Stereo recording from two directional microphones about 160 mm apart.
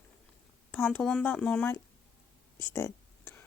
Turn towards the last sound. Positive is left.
turn(degrees=15)  # may be behind; listen again after turning